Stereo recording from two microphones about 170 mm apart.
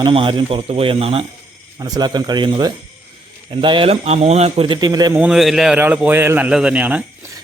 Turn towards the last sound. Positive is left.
turn(degrees=-10)  # may be behind; listen again after turning